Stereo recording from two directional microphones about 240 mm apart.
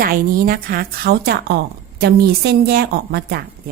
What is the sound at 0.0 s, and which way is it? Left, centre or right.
A woman's voice, right.